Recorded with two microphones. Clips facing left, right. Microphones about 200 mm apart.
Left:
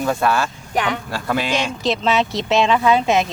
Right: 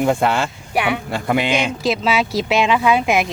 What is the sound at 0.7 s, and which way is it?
Speech, 10° right (ahead or behind).